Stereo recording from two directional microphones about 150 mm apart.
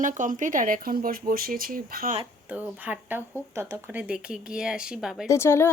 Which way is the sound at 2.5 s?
10° right (ahead or behind).